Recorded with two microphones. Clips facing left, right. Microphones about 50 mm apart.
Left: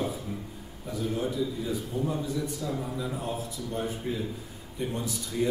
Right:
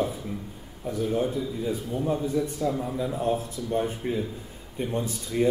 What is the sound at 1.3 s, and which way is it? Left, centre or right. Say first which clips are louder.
A man's voice: right 1 dB; right.